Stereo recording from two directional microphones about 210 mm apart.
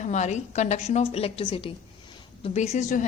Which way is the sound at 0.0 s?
35° left (ahead or behind).